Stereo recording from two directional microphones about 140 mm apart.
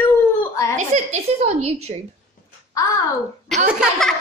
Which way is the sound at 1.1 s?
50° right (ahead or behind).